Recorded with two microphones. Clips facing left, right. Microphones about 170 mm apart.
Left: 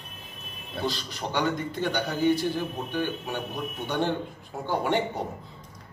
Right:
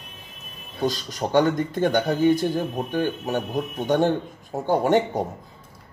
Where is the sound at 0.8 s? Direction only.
45° right (ahead or behind).